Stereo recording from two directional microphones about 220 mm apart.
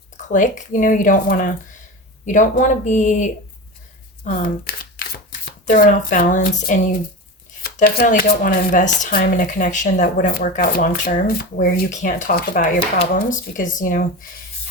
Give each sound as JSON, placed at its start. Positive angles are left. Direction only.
{"t": 0.2, "sound": "speech", "side_deg": 35}
{"t": 4.2, "sound": "crumpling", "side_deg": 40}
{"t": 5.5, "sound": "speech", "side_deg": 40}